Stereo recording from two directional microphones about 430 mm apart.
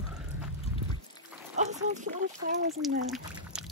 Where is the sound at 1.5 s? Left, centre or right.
Centre.